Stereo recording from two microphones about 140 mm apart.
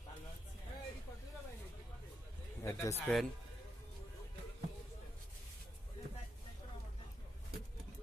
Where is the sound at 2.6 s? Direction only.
20° left (ahead or behind).